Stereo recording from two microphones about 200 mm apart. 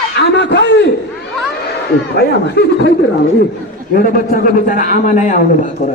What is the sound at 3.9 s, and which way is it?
A man's voice, 45° left (ahead or behind).